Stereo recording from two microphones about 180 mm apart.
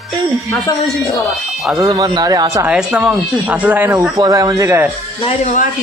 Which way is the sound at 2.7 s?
5° right (ahead or behind).